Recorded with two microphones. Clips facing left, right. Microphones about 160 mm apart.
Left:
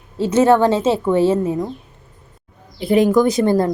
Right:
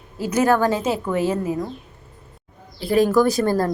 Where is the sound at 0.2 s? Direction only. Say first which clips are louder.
Left 5 dB; 25° left (ahead or behind).